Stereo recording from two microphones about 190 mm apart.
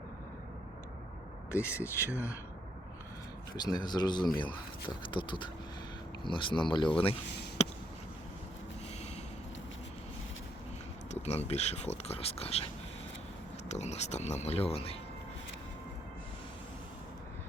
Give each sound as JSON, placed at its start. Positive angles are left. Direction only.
{"t": 1.5, "sound": "speech", "side_deg": 15}
{"t": 3.6, "sound": "speech", "side_deg": 20}
{"t": 11.1, "sound": "speech", "side_deg": 35}
{"t": 13.7, "sound": "speech", "side_deg": 35}